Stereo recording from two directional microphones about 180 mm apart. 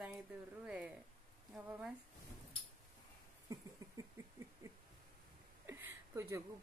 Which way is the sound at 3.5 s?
15° right (ahead or behind).